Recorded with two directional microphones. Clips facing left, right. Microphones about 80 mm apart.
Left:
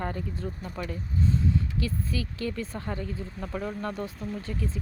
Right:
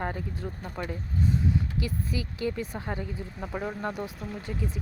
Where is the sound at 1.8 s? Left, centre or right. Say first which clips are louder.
Left 1 dB; centre.